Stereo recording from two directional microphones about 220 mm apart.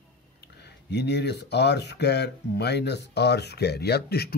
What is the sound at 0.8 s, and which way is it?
Speech, 50° left (ahead or behind).